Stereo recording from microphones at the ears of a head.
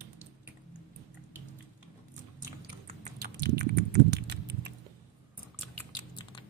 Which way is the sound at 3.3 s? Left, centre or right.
Right.